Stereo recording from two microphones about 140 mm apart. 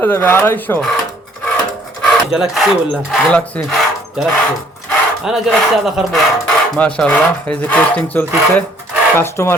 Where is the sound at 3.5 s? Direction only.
10° left (ahead or behind).